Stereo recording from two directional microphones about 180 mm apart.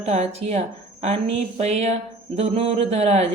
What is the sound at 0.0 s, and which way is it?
Speech, 35° right (ahead or behind).